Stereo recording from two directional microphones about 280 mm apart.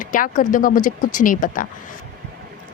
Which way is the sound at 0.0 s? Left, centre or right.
Left.